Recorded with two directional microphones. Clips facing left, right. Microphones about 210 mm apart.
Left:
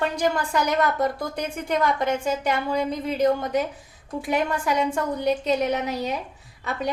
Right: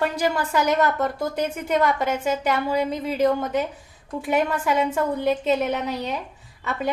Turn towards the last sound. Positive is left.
turn(degrees=0)  # may be behind; listen again after turning